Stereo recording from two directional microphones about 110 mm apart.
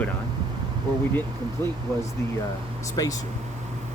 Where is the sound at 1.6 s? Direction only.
20° left (ahead or behind).